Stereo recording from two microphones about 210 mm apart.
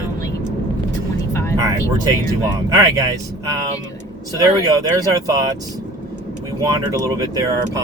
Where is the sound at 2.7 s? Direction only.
15° right (ahead or behind).